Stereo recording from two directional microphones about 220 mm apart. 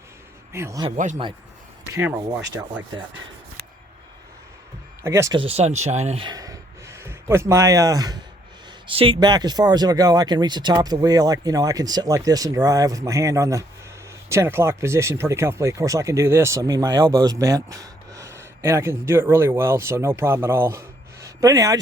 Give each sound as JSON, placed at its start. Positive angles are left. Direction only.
{"t": 0.5, "sound": "speech", "side_deg": -15}
{"t": 0.9, "sound": "speech", "side_deg": -35}
{"t": 2.0, "sound": "speech", "side_deg": -10}
{"t": 5.0, "sound": "speech", "side_deg": -15}